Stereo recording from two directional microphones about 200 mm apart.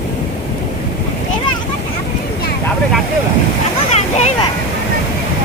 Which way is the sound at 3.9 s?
35° left (ahead or behind).